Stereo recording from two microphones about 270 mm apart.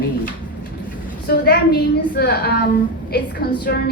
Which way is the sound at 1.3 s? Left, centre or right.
Left.